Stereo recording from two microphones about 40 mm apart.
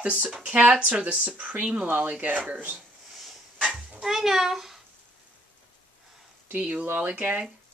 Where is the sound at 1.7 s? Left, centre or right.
Right.